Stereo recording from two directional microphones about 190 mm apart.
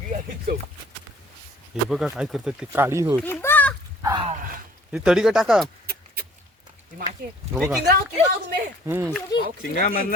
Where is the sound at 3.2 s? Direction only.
10° left (ahead or behind).